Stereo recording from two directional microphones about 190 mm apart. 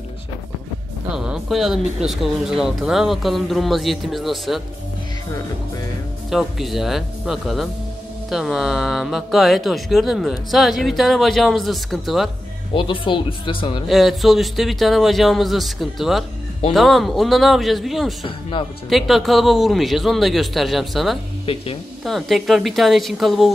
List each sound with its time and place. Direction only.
1.1 s speech: 5° right (ahead or behind)
6.3 s speech: centre (ahead or behind)
12.7 s speech: 25° left (ahead or behind)
13.8 s speech: centre (ahead or behind)
18.2 s speech: 25° left (ahead or behind)
18.9 s speech: centre (ahead or behind)
21.5 s speech: 30° left (ahead or behind)
22.0 s speech: centre (ahead or behind)